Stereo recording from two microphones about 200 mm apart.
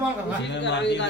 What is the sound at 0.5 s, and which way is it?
Speech, 60° left (ahead or behind).